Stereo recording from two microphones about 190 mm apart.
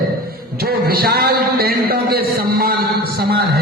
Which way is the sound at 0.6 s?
55° right (ahead or behind).